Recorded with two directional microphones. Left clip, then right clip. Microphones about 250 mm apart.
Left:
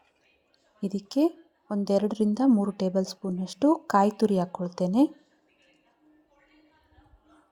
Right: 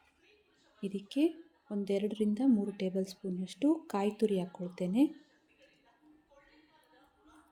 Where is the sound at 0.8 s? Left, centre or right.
Left.